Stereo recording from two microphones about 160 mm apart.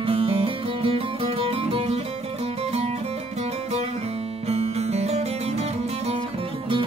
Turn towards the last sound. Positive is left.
turn(degrees=-40)  # may be behind; listen again after turning